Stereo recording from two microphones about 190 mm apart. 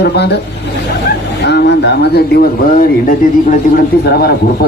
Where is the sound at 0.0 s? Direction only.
60° left (ahead or behind).